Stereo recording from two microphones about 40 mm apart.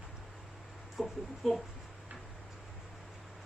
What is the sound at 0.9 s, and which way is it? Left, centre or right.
Speech, centre.